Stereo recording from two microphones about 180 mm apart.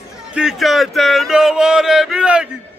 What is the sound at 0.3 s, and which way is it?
Speech, 5° right (ahead or behind).